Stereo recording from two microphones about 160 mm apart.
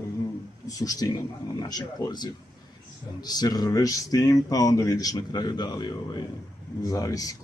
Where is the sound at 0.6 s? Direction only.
20° left (ahead or behind).